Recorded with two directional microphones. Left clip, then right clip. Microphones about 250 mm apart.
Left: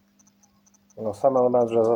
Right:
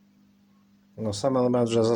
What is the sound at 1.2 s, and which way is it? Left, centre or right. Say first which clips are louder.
Speech: left 5 dB; right.